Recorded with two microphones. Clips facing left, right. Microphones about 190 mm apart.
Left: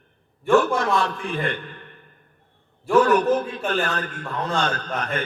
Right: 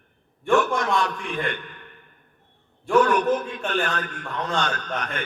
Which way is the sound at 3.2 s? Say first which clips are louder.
Left 2 dB; 35° left (ahead or behind).